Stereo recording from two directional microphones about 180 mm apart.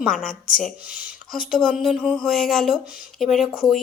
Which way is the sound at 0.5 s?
5° right (ahead or behind).